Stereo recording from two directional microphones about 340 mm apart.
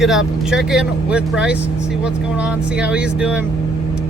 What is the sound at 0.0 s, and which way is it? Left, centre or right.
Speech, centre.